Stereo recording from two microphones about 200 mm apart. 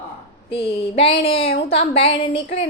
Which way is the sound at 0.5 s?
25° left (ahead or behind).